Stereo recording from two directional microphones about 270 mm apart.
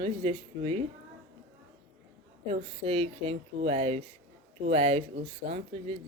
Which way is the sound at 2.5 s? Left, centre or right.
Right.